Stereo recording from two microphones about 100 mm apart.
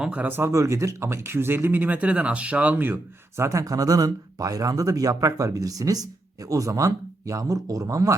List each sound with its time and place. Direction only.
0.0 s speech: 15° right (ahead or behind); by 8.1 s 35° right (ahead or behind)